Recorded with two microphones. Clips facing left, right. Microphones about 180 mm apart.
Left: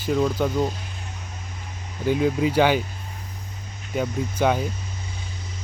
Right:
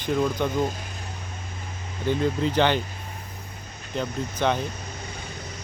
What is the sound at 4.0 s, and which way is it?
Speech, 10° left (ahead or behind).